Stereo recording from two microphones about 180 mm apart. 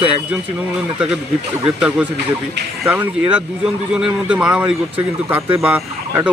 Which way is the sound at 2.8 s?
10° right (ahead or behind).